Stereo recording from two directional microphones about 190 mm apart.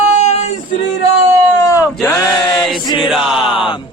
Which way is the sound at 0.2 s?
35° left (ahead or behind).